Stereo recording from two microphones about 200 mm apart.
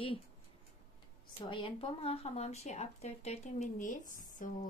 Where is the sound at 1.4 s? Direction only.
25° left (ahead or behind).